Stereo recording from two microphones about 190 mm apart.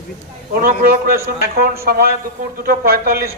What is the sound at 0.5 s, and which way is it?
A man's voice, 50° right (ahead or behind).